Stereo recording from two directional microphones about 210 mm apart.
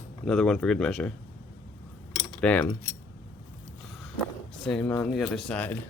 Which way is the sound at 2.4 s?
5° left (ahead or behind).